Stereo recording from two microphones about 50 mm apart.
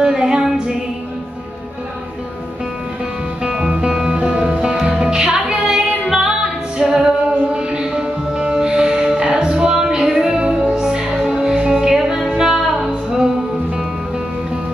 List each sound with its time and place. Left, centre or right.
0.0 s music: centre
3.4 s music: centre